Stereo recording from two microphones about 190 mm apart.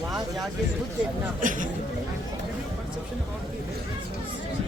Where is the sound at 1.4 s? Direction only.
45° right (ahead or behind).